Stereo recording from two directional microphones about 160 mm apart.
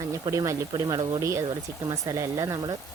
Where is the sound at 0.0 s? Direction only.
20° right (ahead or behind).